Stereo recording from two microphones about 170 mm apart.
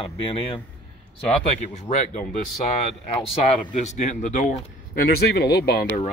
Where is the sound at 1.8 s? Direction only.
45° left (ahead or behind).